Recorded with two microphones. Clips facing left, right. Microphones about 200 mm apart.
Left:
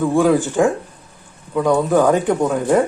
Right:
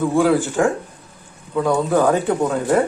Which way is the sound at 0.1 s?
15° left (ahead or behind).